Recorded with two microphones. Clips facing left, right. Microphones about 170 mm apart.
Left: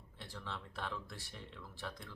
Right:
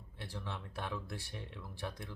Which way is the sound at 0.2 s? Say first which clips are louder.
Right 3 dB; 10° right (ahead or behind).